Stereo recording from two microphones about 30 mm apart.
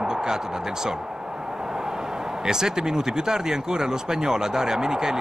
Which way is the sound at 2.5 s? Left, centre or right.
Centre.